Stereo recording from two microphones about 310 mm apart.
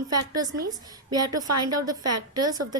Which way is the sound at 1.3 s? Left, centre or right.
Right.